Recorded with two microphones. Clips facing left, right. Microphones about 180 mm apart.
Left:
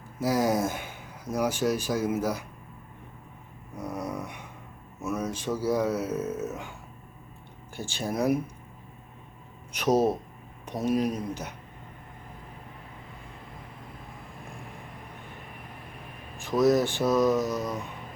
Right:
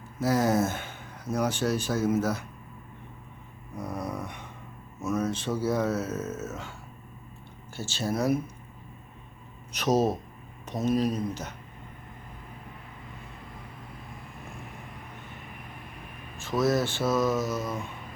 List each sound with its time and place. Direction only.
0.2 s speech: 10° left (ahead or behind)
3.8 s speech: 10° left (ahead or behind)
7.8 s speech: 15° left (ahead or behind)
9.7 s speech: 10° left (ahead or behind)
16.4 s speech: 15° left (ahead or behind)